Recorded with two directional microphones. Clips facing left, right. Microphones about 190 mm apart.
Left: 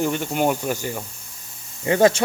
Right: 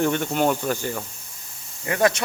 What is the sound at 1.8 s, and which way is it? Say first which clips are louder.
Speech: left 5 dB; 25° left (ahead or behind).